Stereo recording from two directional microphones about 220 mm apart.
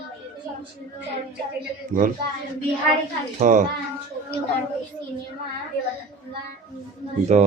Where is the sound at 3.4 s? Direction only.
35° right (ahead or behind).